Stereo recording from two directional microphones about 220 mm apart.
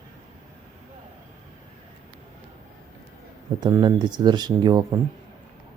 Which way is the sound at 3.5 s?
20° right (ahead or behind).